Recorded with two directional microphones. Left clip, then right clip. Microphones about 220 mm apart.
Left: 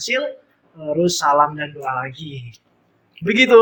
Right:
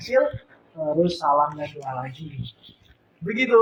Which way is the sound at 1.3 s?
60° left (ahead or behind).